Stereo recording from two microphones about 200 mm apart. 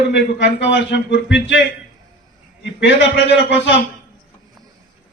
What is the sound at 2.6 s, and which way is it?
A man's voice, 60° left (ahead or behind).